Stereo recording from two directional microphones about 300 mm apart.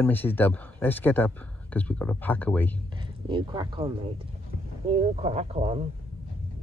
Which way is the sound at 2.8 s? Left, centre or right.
Centre.